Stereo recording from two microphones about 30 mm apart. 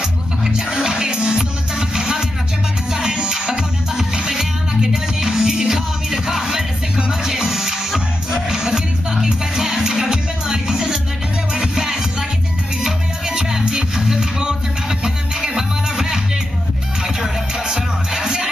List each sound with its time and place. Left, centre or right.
0.7 s music: centre
17.6 s music: centre